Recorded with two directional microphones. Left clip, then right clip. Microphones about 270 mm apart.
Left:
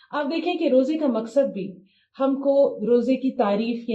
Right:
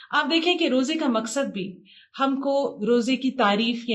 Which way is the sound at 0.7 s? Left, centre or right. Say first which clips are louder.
Left 3 dB; right.